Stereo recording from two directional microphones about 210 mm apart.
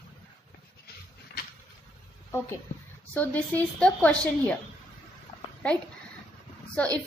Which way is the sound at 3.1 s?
10° left (ahead or behind).